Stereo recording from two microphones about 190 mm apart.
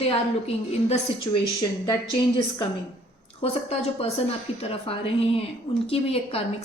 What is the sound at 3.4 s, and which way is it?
Speech, 35° left (ahead or behind).